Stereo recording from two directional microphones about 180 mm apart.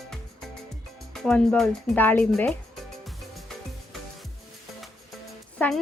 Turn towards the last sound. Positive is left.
turn(degrees=5)  # may be behind; listen again after turning